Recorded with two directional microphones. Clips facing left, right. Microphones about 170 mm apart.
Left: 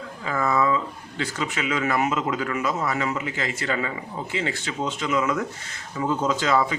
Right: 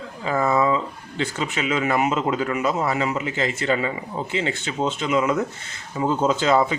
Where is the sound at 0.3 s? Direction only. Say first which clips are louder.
Right 3 dB; 25° right (ahead or behind).